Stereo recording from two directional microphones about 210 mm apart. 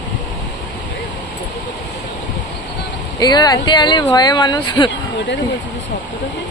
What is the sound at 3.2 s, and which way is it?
Speech, 20° left (ahead or behind).